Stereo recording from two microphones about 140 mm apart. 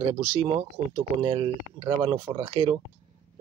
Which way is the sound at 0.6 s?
35° right (ahead or behind).